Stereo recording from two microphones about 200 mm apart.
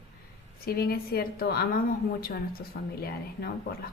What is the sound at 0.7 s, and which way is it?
A woman's voice, 50° left (ahead or behind).